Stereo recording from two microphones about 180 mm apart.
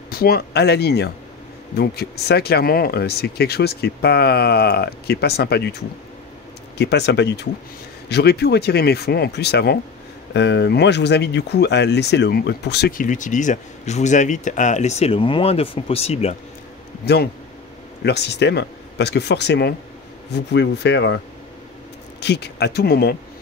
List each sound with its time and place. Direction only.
0.1 s speech: 55° left (ahead or behind)
6.8 s speech: 70° left (ahead or behind); by 16.3 s 35° left (ahead or behind)
17.0 s speech: 65° left (ahead or behind)
22.2 s speech: 65° left (ahead or behind)